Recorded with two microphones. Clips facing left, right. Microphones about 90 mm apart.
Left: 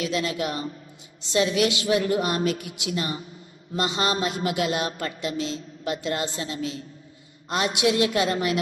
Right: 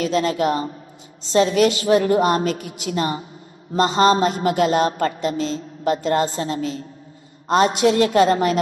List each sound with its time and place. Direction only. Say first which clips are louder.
0.0 s speech: right 7 dB; 40° right (ahead or behind)